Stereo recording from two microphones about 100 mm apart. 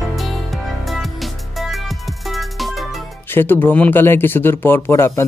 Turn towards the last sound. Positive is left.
turn(degrees=25)  # may be behind; listen again after turning